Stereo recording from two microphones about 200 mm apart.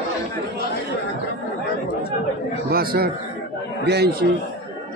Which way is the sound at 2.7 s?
50° right (ahead or behind).